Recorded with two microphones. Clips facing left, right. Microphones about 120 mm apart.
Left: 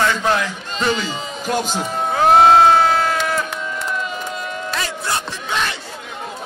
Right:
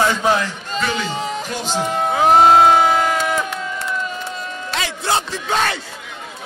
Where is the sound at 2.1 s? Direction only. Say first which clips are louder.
Left 1 dB; 10° right (ahead or behind).